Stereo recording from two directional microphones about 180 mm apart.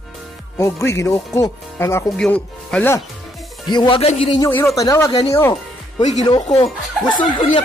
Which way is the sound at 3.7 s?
25° left (ahead or behind).